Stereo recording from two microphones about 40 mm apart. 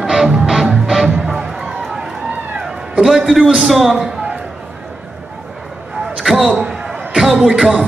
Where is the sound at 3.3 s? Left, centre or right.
Centre.